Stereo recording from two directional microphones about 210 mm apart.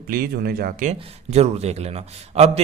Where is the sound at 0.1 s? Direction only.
45° right (ahead or behind).